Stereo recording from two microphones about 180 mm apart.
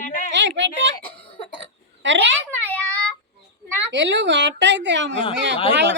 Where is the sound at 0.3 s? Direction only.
90° right.